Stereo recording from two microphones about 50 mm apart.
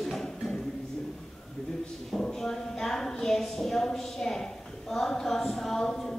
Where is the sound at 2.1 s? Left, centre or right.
Centre.